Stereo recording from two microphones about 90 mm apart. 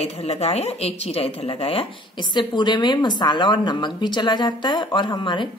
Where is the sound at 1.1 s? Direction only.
90° left.